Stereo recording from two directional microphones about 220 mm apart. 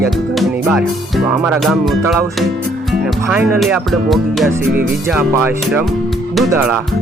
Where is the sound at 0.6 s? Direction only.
Centre (ahead or behind).